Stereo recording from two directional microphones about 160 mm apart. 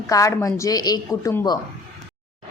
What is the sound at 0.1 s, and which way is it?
Speech, 20° left (ahead or behind).